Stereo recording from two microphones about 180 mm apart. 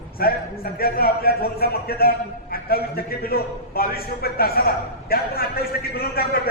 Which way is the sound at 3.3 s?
55° left (ahead or behind).